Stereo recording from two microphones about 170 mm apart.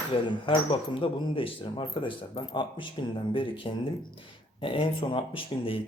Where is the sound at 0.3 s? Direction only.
30° left (ahead or behind).